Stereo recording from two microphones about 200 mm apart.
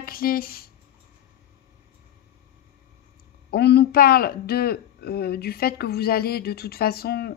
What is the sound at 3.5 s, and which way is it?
Speech, 55° left (ahead or behind).